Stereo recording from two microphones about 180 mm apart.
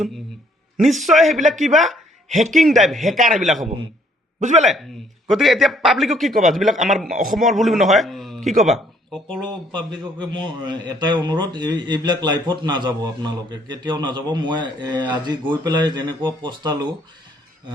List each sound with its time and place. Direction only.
0.9 s a man's voice: centre (ahead or behind)
2.3 s a man's voice: 45° right (ahead or behind)
2.6 s a man's voice: centre (ahead or behind)
4.4 s a man's voice: 40° right (ahead or behind)
5.3 s a man's voice: centre (ahead or behind)
9.4 s a man's voice: 25° right (ahead or behind)